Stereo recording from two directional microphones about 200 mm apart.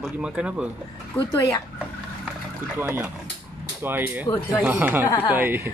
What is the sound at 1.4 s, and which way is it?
Speech, 15° left (ahead or behind).